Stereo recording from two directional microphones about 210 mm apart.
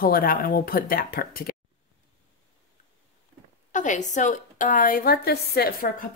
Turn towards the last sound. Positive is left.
turn(degrees=50)  # may be behind; listen again after turning